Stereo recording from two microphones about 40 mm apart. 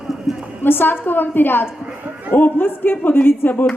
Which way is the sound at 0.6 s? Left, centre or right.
Left.